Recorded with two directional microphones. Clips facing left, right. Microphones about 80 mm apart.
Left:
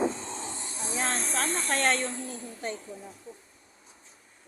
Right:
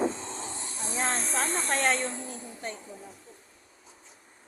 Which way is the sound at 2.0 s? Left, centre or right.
Right.